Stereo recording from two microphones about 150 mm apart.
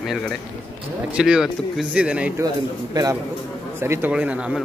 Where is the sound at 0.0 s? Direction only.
Centre (ahead or behind).